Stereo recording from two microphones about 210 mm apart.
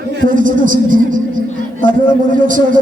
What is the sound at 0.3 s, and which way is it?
Speech, 40° right (ahead or behind).